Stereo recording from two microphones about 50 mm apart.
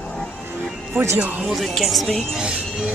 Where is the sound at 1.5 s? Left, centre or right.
Centre.